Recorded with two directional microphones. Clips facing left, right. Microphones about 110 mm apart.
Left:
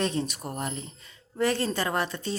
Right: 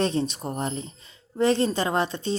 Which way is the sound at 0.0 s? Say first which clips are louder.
Right 4 dB; 30° right (ahead or behind).